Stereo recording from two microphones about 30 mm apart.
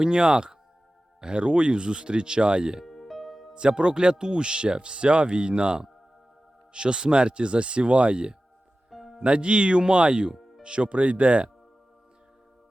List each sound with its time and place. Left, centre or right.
0.0 s speech: right
2.8 s music: centre
3.5 s speech: right
8.9 s music: centre
9.2 s speech: right